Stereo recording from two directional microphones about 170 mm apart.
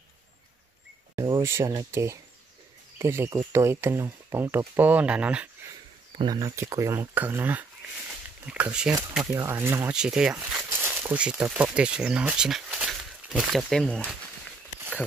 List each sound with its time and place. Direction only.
1.1 s speech: 15° right (ahead or behind)
6.1 s speech: 25° right (ahead or behind); by 8.9 s 5° right (ahead or behind)
9.2 s speech: 20° right (ahead or behind); by 14.0 s 5° left (ahead or behind)